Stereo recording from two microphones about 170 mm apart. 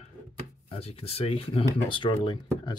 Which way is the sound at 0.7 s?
35° left (ahead or behind).